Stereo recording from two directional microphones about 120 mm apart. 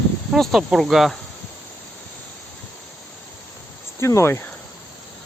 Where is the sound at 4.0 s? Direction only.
25° left (ahead or behind).